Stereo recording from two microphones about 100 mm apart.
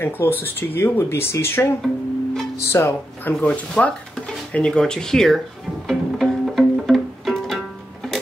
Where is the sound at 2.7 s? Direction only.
25° left (ahead or behind).